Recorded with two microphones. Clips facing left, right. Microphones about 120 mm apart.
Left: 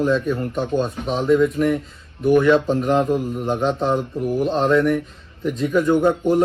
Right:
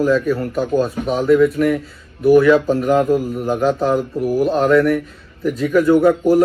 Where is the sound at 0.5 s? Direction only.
5° right (ahead or behind).